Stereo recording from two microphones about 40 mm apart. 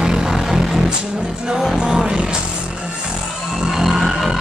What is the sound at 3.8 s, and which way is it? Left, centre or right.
Music, centre.